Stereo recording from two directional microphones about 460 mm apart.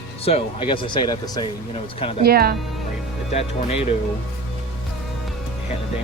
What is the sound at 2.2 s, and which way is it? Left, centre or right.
Speech, centre.